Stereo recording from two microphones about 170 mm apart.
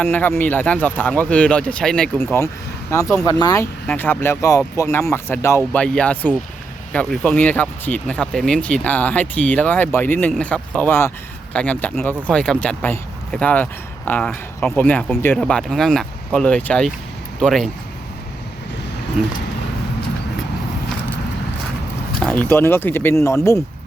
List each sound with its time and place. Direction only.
0.0 s speech: 10° left (ahead or behind)
3.8 s speech: 10° left (ahead or behind)
19.2 s speech: 5° right (ahead or behind)
22.2 s speech: 10° left (ahead or behind)